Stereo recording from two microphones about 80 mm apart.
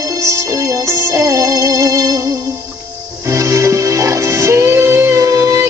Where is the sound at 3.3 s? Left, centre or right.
Right.